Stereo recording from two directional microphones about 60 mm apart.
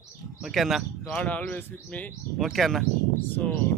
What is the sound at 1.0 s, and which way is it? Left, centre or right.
Speech, left.